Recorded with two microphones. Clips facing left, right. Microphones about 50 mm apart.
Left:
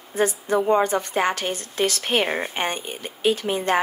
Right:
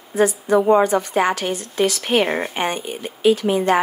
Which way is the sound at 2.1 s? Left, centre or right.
Right.